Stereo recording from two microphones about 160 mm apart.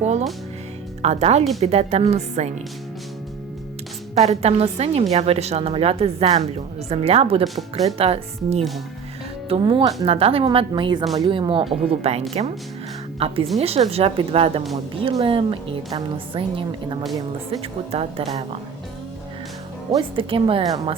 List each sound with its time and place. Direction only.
0.0 s a woman's voice: 45° right (ahead or behind)
4.1 s a woman's voice: 45° right (ahead or behind)
20.0 s a woman's voice: 35° right (ahead or behind)